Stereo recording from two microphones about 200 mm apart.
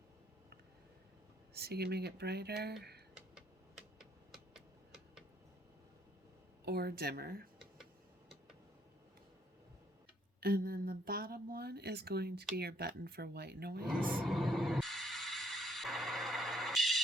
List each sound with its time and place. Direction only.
1.5 s speech: 55° right (ahead or behind)
6.7 s speech: 50° right (ahead or behind)
10.4 s speech: 50° right (ahead or behind)
13.8 s music: 5° right (ahead or behind)